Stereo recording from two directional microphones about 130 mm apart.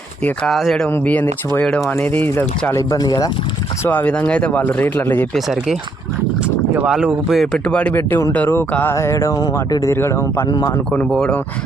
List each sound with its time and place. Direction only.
0.3 s speech: centre (ahead or behind)
0.9 s speech: 15° left (ahead or behind)
2.7 s speech: 30° left (ahead or behind)
3.8 s speech: 15° left (ahead or behind)
5.3 s speech: centre (ahead or behind)
6.7 s speech: 5° right (ahead or behind); by 10.4 s 20° left (ahead or behind)
11.1 s speech: 5° left (ahead or behind)